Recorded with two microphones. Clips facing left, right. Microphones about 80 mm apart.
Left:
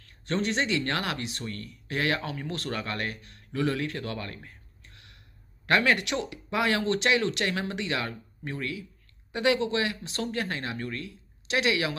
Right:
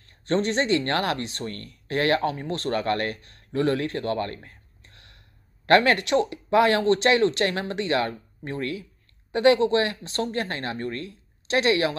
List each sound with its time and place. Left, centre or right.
0.3 s speech: right
2.3 s speech: right
2.8 s speech: right
4.5 s a sound: right
5.7 s speech: right
6.0 s speech: right